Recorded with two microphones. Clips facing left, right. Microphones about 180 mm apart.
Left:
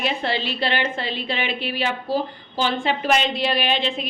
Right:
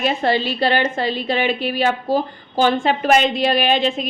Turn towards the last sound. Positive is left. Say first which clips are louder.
# right 5 dB
turn(degrees=-45)  # may be behind; listen again after turning